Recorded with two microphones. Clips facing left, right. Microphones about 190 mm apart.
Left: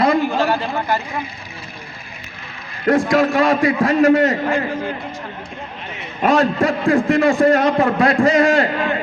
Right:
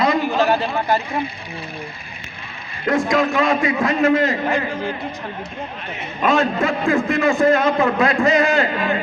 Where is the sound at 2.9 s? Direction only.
35° left (ahead or behind).